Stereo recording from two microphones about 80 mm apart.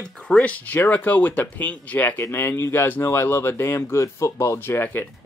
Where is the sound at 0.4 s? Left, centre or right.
Centre.